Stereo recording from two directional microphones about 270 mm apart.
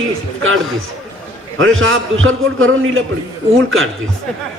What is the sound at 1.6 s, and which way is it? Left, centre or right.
A man's voice, right.